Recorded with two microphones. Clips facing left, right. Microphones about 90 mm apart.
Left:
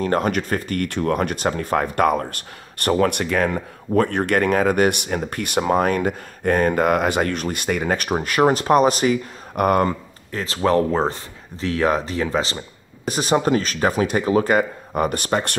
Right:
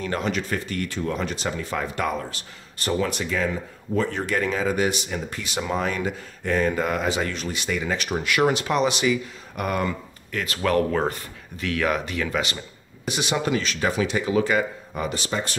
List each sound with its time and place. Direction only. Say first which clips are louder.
0.0 s speech: left 6 dB; 45° left (ahead or behind)
10.3 s speech: left 4 dB; 30° left (ahead or behind); by 15.5 s 55° left (ahead or behind)